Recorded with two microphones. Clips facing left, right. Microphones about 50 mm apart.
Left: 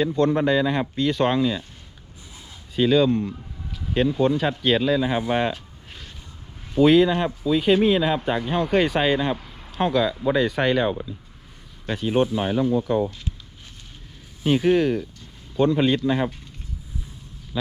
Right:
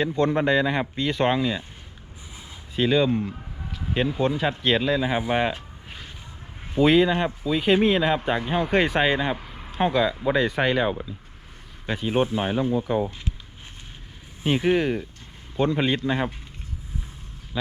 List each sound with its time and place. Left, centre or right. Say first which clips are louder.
0.1 s speech: left 1 dB; centre
2.7 s speech: left 3 dB; centre
6.7 s speech: left 2 dB; centre
14.4 s speech: left 3 dB; right